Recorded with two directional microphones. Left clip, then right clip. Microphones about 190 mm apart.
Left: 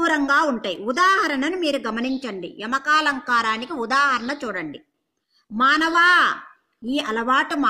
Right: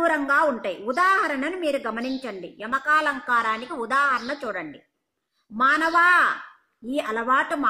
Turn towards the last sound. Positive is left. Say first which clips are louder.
# left 2 dB
turn(degrees=50)  # may be behind; listen again after turning